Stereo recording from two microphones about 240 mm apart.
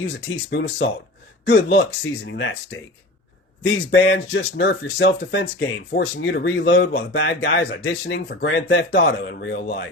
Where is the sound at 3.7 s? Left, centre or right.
Left.